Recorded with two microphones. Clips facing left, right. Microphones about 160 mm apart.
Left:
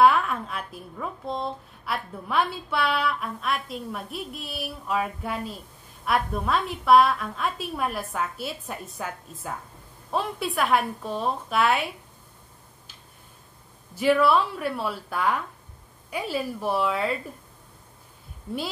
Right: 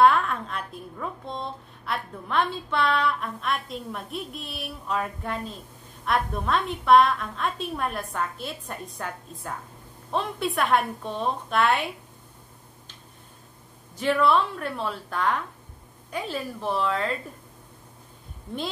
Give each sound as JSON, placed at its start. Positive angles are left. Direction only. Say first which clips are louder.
{"t": 0.0, "sound": "a woman's voice", "louder": "even", "side_deg": 5}
{"t": 13.9, "sound": "a woman's voice", "louder": "left 2 dB", "side_deg": 10}